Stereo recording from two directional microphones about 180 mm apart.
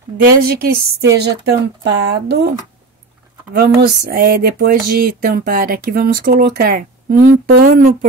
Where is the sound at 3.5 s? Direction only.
60° right (ahead or behind).